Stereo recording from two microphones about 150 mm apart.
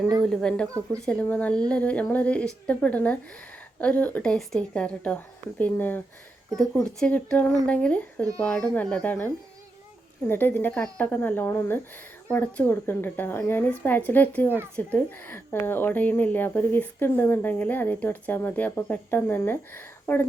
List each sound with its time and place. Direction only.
0.2 s speech: 5° left (ahead or behind)
7.0 s speech: 10° left (ahead or behind)